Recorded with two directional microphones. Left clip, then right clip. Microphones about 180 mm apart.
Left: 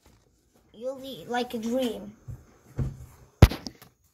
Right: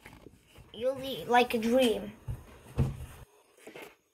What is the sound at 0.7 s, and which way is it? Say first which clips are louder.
Speech: right 3 dB; centre (ahead or behind).